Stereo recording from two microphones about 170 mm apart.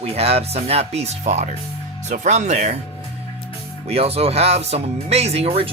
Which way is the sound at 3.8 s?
35° right (ahead or behind).